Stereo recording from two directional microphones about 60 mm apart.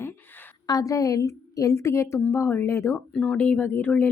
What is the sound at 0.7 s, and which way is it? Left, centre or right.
A woman's voice, left.